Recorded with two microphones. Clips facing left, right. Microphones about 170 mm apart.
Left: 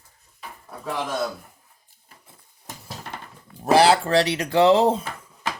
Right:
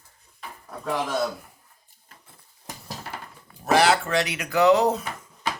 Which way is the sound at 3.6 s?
30° left (ahead or behind).